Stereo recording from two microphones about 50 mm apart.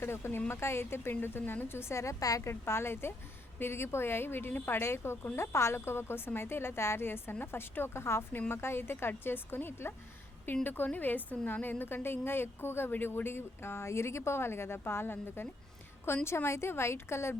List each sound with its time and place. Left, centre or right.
0.0 s a woman's voice: left
2.0 s a woman's voice: left
4.8 s speech: left
7.0 s a woman's voice: left
8.3 s a woman's voice: left
10.4 s a woman's voice: left
16.2 s speech: left